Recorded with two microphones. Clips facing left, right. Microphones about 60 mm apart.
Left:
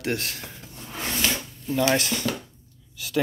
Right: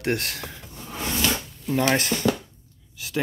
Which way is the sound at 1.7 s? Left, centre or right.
Right.